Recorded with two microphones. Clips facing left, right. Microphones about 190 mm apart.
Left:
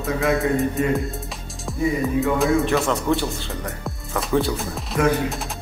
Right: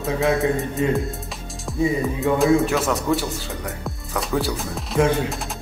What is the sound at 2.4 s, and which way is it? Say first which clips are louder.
Speech: right 1 dB; centre (ahead or behind).